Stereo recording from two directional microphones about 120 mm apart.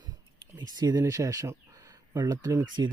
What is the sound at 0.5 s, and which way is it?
Speech, 35° right (ahead or behind).